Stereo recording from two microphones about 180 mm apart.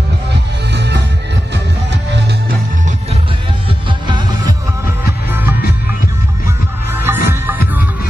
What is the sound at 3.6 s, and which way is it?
Music, 25° right (ahead or behind).